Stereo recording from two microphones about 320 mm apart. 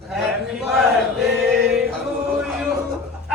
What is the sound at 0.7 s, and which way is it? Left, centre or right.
Chant, centre.